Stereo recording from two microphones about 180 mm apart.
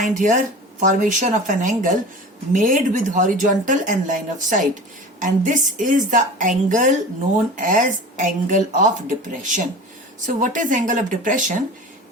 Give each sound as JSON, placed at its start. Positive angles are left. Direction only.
{"t": 0.1, "sound": "speech", "side_deg": -45}